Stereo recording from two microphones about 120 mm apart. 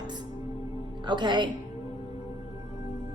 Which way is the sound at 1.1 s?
40° right (ahead or behind).